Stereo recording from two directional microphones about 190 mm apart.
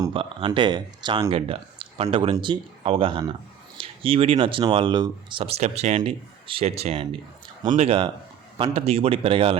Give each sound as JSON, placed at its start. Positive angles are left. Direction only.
{"t": 0.0, "sound": "speech", "side_deg": -25}